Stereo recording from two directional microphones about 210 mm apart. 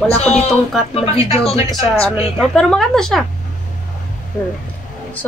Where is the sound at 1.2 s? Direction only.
30° left (ahead or behind).